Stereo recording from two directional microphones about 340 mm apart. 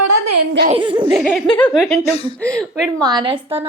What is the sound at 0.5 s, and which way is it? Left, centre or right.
Speech, right.